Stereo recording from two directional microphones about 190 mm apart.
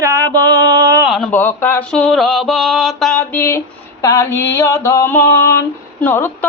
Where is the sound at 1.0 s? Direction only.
Centre (ahead or behind).